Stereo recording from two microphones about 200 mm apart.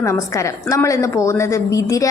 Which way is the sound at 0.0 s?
15° left (ahead or behind).